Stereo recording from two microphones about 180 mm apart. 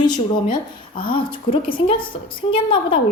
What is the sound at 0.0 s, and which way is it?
A woman's voice, 25° left (ahead or behind).